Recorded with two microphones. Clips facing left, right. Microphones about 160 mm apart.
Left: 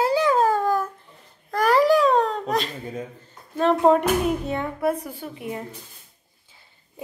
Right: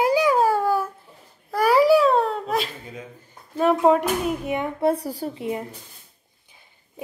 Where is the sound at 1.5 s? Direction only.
10° right (ahead or behind).